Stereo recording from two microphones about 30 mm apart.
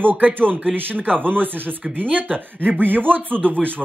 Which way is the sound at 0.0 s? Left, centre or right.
Right.